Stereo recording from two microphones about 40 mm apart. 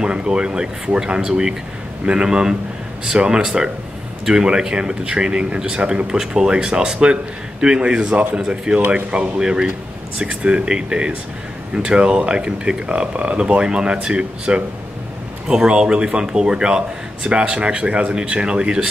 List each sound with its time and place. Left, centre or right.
0.0 s a man's voice: right
6.0 s a man's voice: centre
8.7 s speech: right
9.4 s a man's voice: right